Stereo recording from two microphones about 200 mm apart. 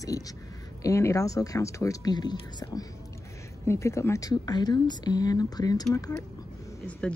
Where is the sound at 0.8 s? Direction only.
15° left (ahead or behind).